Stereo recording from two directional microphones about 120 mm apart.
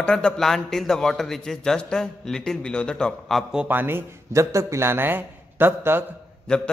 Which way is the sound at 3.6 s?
15° right (ahead or behind).